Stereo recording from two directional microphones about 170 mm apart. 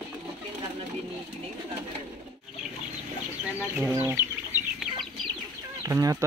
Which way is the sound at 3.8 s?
10° right (ahead or behind).